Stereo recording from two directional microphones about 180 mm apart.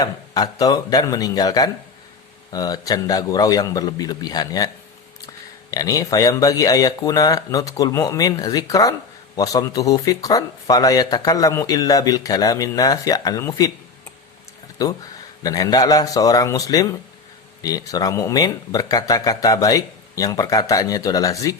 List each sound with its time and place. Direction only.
0.0 s speech: 20° left (ahead or behind)
5.7 s speech: 20° left (ahead or behind)
14.8 s speech: 20° left (ahead or behind)